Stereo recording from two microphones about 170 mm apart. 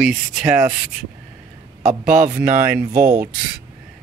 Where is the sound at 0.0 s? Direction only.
Centre (ahead or behind).